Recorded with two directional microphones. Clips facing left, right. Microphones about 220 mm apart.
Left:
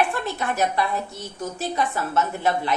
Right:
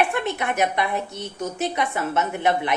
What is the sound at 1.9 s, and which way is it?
Speech, 20° right (ahead or behind).